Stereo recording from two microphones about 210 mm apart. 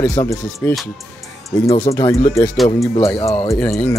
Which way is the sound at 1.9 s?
15° left (ahead or behind).